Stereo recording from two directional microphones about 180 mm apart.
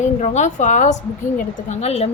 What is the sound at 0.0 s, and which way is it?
A woman's voice, 40° left (ahead or behind).